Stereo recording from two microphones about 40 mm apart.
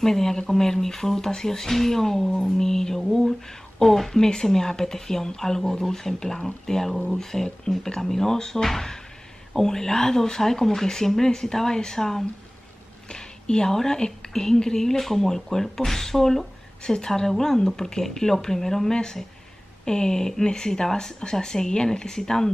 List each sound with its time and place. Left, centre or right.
0.0 s speech: centre